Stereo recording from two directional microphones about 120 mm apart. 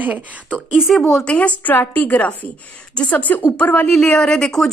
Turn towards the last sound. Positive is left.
turn(degrees=5)  # may be behind; listen again after turning